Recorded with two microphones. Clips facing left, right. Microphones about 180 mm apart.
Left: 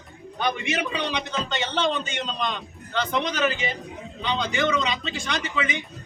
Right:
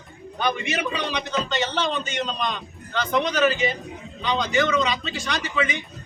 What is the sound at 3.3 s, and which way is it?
A man's voice, 20° left (ahead or behind).